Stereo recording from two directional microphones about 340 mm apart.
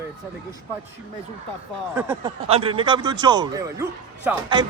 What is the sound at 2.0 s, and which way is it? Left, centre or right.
Speech, centre.